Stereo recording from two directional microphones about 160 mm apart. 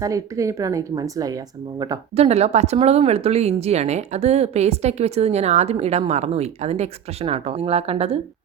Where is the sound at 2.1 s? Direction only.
40° right (ahead or behind).